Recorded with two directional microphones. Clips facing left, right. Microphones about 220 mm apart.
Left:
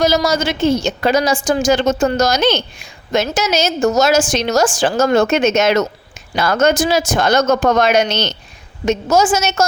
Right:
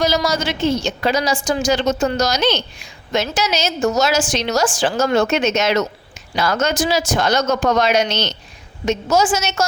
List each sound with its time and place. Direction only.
0.0 s a woman's voice: 45° left (ahead or behind)